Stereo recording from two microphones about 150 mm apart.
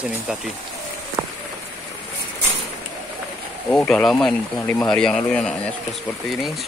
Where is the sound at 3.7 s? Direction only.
10° left (ahead or behind).